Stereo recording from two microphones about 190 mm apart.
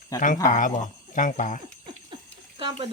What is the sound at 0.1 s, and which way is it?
Speech, 15° left (ahead or behind).